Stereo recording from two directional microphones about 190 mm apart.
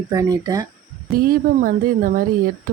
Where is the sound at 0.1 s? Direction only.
20° right (ahead or behind).